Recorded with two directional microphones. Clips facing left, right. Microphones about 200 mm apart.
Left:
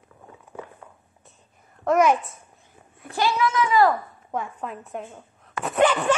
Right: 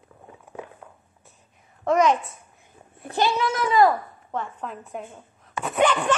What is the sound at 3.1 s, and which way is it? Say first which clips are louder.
Speech: even; 25° right (ahead or behind).